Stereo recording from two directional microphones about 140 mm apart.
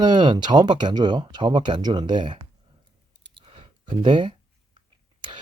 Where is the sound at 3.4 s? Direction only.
40° right (ahead or behind).